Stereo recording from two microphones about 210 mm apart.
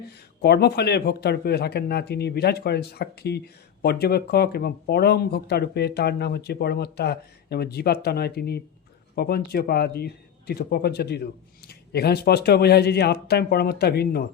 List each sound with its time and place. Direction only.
0.4 s speech: 50° left (ahead or behind)